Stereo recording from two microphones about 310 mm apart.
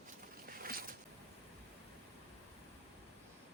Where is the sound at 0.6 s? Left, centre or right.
Right.